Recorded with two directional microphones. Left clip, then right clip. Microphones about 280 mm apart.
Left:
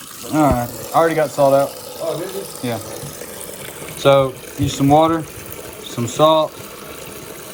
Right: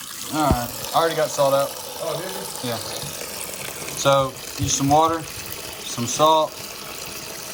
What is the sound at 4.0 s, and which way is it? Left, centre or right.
Speech, centre.